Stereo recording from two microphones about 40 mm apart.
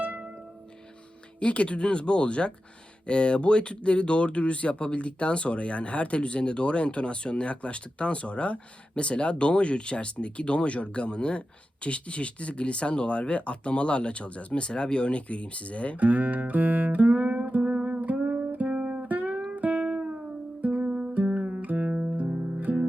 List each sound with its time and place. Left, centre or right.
1.4 s speech: left
16.0 s music: right
17.2 s music: right
17.5 s music: right
18.3 s music: right
21.8 s music: right